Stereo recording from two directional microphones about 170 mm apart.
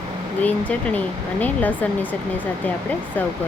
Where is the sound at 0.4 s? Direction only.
10° left (ahead or behind).